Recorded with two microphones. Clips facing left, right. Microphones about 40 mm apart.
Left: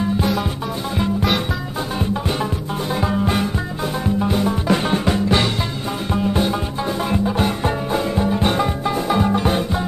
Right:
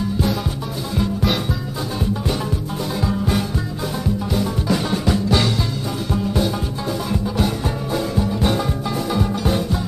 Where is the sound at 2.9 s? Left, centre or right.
Left.